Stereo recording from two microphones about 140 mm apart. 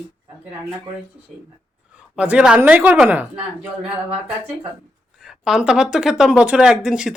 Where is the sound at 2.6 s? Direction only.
10° right (ahead or behind).